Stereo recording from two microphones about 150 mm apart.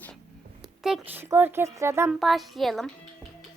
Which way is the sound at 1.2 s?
15° right (ahead or behind).